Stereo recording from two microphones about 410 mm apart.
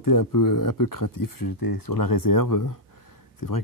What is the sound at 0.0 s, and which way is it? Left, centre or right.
Speech, left.